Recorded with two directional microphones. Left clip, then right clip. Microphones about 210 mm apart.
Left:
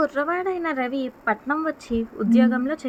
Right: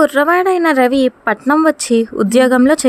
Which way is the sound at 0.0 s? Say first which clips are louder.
Right 12 dB; 40° right (ahead or behind).